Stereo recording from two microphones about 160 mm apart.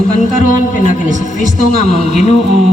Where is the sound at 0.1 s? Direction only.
50° left (ahead or behind).